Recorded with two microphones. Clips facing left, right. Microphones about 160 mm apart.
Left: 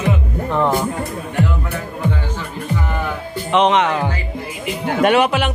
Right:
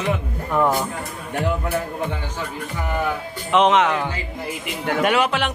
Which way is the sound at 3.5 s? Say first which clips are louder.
Left 1 dB; 5° right (ahead or behind).